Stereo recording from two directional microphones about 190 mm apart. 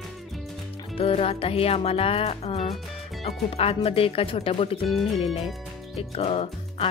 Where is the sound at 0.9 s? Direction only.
30° left (ahead or behind).